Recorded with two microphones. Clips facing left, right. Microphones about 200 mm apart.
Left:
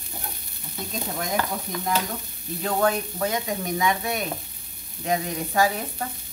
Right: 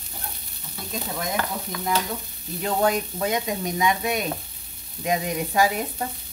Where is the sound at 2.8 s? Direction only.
20° right (ahead or behind).